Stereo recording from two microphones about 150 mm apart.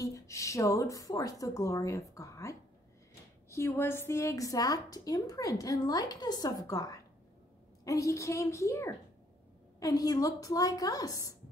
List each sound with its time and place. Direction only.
0.0 s a woman's voice: 20° left (ahead or behind)